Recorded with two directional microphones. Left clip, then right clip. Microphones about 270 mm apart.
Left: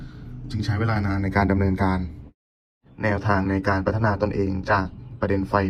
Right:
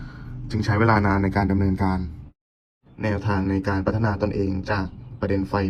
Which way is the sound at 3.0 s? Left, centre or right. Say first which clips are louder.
Left 3 dB; centre.